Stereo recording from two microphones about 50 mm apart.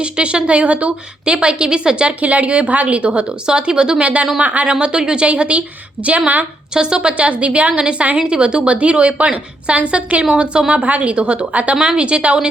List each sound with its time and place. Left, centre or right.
0.0 s a woman's voice: right
3.4 s a woman's voice: centre
6.7 s a woman's voice: centre